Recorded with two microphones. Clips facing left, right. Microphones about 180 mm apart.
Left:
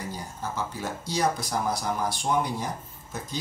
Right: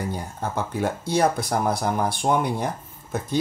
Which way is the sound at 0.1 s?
55° right (ahead or behind).